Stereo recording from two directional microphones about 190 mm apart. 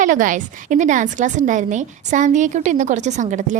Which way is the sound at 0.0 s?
45° right (ahead or behind).